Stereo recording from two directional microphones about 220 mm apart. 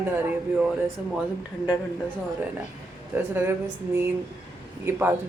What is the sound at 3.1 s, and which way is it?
Speech, 10° right (ahead or behind).